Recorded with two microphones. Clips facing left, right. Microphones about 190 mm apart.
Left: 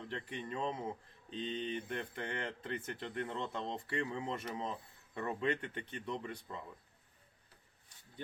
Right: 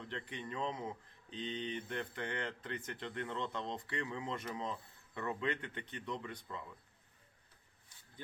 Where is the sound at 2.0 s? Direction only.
30° left (ahead or behind).